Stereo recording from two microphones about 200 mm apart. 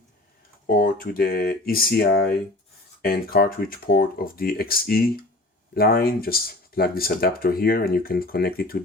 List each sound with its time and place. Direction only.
0.8 s speech: 45° left (ahead or behind)